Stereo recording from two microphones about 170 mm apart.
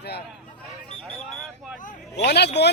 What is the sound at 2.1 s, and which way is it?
Speech, 75° left (ahead or behind).